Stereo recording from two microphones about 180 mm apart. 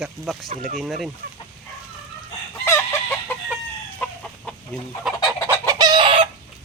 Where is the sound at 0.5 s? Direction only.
40° right (ahead or behind).